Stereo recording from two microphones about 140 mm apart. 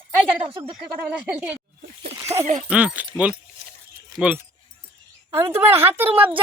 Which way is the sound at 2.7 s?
10° right (ahead or behind).